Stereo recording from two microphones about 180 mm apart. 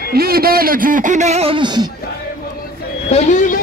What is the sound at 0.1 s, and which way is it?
Speech, 55° right (ahead or behind).